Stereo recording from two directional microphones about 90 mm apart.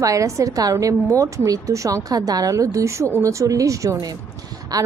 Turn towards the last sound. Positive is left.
turn(degrees=-45)  # may be behind; listen again after turning